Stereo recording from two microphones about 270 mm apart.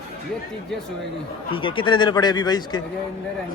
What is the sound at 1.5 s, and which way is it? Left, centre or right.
A man's voice, centre.